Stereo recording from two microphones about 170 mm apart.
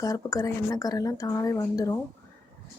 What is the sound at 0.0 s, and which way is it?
Speech, 20° left (ahead or behind).